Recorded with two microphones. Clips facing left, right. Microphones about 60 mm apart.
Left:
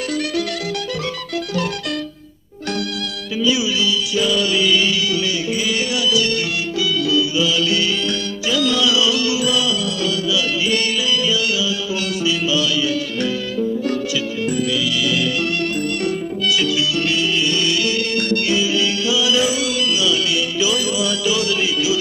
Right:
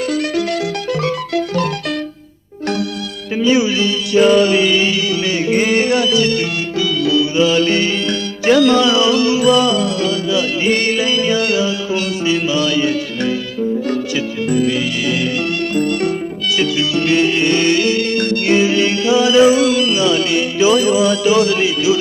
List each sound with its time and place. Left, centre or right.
0.1 s music: right
1.0 s music: right
3.3 s music: right
5.5 s music: right
14.5 s music: right
18.4 s music: right